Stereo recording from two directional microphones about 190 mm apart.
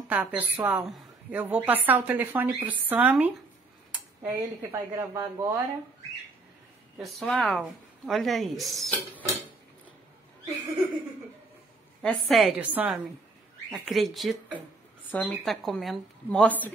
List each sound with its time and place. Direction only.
0.1 s a woman's voice: 10° right (ahead or behind)
7.0 s a woman's voice: centre (ahead or behind)
12.0 s a woman's voice: centre (ahead or behind)